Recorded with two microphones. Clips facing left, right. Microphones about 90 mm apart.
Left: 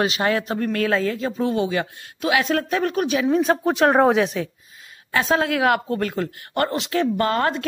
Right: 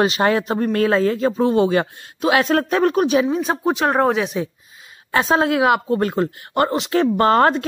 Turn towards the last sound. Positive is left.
turn(degrees=-35)  # may be behind; listen again after turning